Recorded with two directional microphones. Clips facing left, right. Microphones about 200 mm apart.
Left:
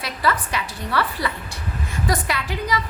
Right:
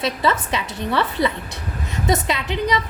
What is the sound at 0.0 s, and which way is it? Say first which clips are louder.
A woman's voice: right 3 dB; 25° right (ahead or behind).